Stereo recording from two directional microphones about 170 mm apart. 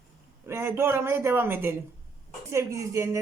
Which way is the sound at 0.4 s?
15° right (ahead or behind).